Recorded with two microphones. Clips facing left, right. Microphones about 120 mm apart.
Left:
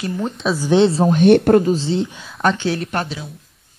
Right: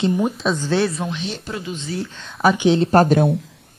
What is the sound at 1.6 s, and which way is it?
Speech, 35° left (ahead or behind).